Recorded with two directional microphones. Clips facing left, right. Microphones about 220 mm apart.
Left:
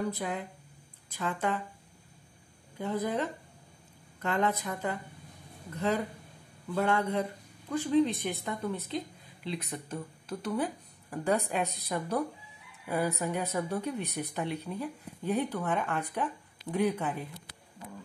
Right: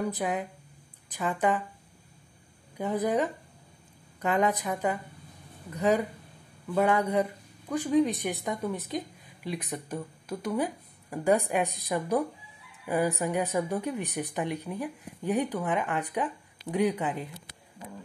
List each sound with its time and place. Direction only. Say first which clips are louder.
0.1 s a woman's voice: right 4 dB; 15° right (ahead or behind)
2.8 s a woman's voice: right 4 dB; 15° right (ahead or behind)